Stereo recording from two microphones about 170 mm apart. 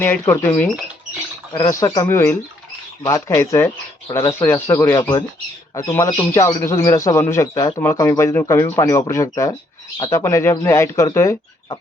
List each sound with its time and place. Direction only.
0.0 s speech: 10° left (ahead or behind)
1.5 s speech: 25° left (ahead or behind)